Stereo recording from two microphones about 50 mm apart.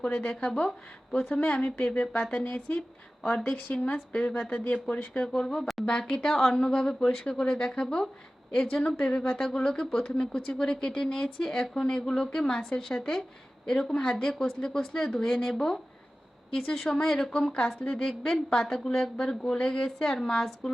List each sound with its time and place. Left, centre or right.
0.0 s speech: left
3.5 s a woman's voice: left; by 20.7 s centre